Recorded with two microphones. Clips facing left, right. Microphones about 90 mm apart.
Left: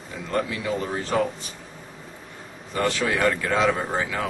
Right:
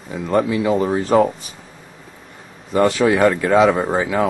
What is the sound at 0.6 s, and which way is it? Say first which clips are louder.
Speech: right 9 dB; 40° right (ahead or behind).